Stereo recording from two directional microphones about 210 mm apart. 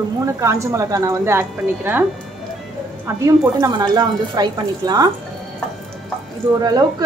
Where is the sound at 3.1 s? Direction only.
15° right (ahead or behind).